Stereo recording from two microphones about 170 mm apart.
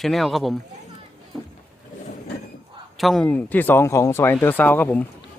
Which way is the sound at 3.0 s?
5° left (ahead or behind).